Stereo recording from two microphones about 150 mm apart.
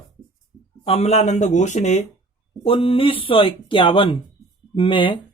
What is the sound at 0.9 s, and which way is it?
Speech, 45° left (ahead or behind).